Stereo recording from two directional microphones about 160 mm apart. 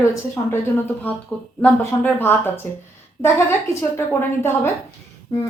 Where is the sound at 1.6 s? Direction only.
10° left (ahead or behind).